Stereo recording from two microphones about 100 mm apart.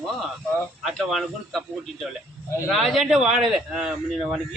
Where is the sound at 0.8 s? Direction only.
Centre (ahead or behind).